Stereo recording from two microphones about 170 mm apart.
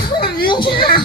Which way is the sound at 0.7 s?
65° left (ahead or behind).